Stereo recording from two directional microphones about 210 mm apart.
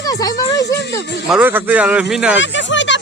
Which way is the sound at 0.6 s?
55° left (ahead or behind).